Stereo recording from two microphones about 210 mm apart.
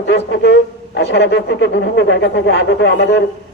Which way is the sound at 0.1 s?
55° left (ahead or behind).